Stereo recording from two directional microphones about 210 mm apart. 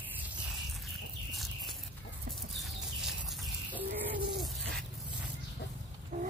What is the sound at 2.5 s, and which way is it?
Bird, centre (ahead or behind).